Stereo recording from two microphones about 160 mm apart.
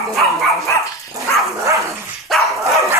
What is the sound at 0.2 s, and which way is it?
Dog, centre (ahead or behind).